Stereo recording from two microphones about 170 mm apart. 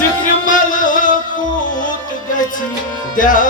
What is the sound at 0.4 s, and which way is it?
Music, 50° left (ahead or behind).